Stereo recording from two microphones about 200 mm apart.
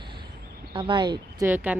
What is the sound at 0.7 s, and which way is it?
Speech, 25° right (ahead or behind).